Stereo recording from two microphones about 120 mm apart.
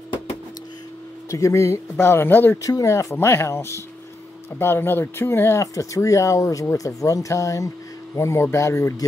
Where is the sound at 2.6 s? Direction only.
30° left (ahead or behind).